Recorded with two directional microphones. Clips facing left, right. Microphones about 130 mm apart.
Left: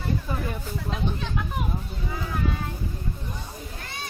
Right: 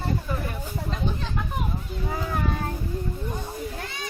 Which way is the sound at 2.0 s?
45° right (ahead or behind).